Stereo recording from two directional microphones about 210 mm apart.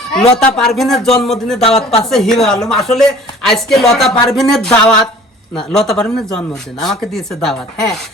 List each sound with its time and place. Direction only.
0.1 s speech: centre (ahead or behind)
1.6 s speech: 30° left (ahead or behind)
2.0 s speech: centre (ahead or behind)